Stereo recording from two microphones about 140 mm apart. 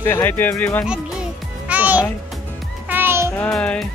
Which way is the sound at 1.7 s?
10° right (ahead or behind).